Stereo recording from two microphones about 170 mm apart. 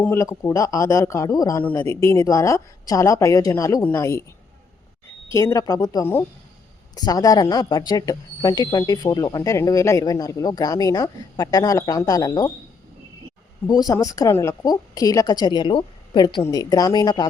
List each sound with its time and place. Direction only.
0.0 s a woman's voice: 15° left (ahead or behind)
5.3 s speech: 15° left (ahead or behind)
13.7 s speech: 20° left (ahead or behind)